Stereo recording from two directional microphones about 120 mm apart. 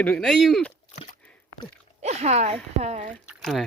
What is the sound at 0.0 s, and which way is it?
Speech, 10° left (ahead or behind).